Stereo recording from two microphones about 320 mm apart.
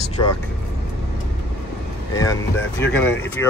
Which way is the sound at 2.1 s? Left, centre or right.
Centre.